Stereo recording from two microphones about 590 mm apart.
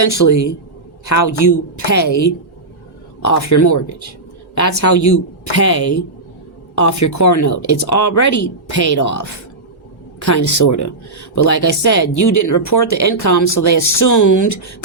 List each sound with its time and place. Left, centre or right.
0.3 s speech: left
10.2 s speech: left